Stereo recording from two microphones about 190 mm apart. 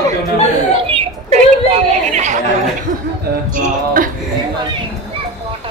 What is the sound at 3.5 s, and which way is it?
Speech, 45° right (ahead or behind).